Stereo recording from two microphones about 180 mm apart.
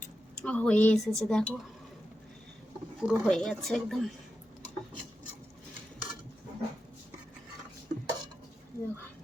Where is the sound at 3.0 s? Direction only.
Centre (ahead or behind).